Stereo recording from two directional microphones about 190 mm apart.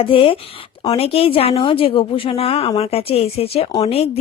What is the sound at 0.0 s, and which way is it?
A woman's voice, 30° left (ahead or behind).